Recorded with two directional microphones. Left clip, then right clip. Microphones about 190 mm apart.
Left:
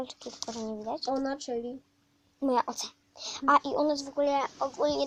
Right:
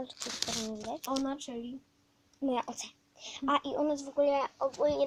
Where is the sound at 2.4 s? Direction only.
20° left (ahead or behind).